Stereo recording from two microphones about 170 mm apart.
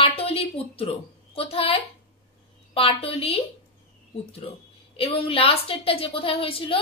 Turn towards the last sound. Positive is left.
turn(degrees=30)  # may be behind; listen again after turning